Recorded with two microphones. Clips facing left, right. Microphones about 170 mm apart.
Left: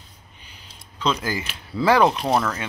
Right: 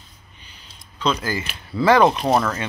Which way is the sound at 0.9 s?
15° left (ahead or behind).